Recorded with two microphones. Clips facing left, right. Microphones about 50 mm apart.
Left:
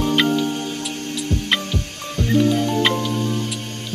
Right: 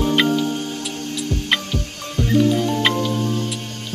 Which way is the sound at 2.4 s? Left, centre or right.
Left.